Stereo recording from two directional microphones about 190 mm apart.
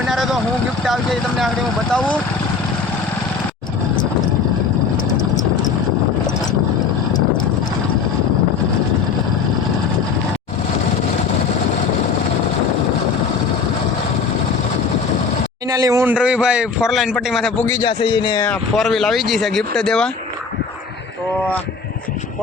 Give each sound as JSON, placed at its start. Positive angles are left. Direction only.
{"t": 0.1, "sound": "vehicle", "side_deg": 0}
{"t": 0.9, "sound": "speech", "side_deg": 0}
{"t": 15.7, "sound": "speech", "side_deg": -15}
{"t": 17.7, "sound": "speech", "side_deg": 20}
{"t": 18.4, "sound": "speech", "side_deg": 5}